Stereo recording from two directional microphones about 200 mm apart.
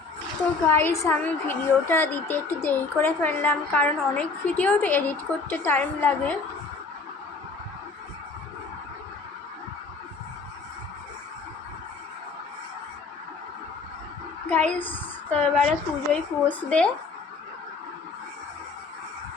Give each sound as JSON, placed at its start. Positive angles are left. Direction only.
{"t": 0.7, "sound": "a woman's voice", "side_deg": 15}
{"t": 14.5, "sound": "a woman's voice", "side_deg": 5}